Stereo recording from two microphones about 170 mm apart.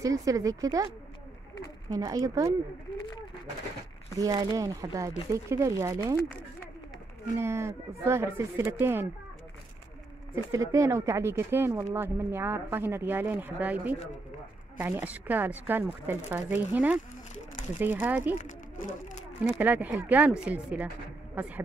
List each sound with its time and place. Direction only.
0.0 s speech: 20° right (ahead or behind)
1.9 s speech: 20° right (ahead or behind)
4.2 s speech: 20° right (ahead or behind)
7.3 s speech: 15° right (ahead or behind)
10.3 s speech: 20° right (ahead or behind)
18.4 s speech: 45° left (ahead or behind)
19.6 s speech: 10° right (ahead or behind)